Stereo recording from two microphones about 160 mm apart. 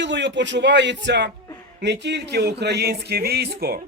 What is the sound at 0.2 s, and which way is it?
Speech, 90° right.